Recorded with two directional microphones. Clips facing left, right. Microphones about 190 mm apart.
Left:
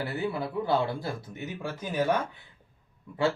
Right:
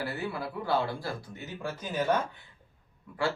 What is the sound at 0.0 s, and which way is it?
Speech, 20° left (ahead or behind).